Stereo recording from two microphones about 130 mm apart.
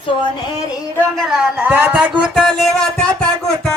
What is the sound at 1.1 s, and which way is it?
Speech, centre (ahead or behind).